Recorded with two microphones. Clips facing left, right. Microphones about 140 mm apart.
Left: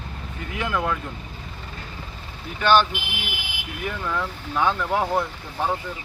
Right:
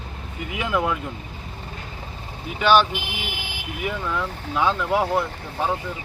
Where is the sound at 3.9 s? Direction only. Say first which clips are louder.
Right 1 dB; 5° right (ahead or behind).